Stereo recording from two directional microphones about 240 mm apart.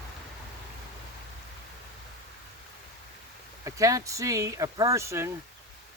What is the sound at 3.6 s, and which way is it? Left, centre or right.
Speech, centre.